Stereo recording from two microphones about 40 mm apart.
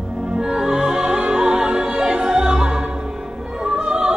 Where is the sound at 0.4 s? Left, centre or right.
Centre.